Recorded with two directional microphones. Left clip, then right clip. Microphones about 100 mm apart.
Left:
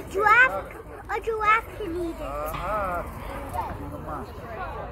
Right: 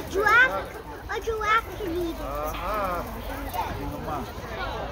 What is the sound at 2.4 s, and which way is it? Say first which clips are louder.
Speech: even; centre (ahead or behind).